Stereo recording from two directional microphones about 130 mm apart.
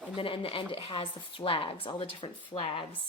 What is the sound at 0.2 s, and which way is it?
A woman's voice, 45° left (ahead or behind).